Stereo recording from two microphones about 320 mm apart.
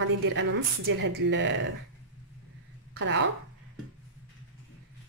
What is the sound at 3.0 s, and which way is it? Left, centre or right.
Speech, right.